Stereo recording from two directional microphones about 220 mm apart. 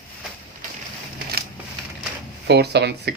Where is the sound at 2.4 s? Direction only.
50° right (ahead or behind).